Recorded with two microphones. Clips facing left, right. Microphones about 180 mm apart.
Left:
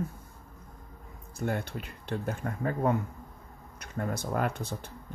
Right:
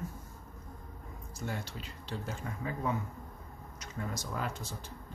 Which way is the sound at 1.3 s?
55° left (ahead or behind).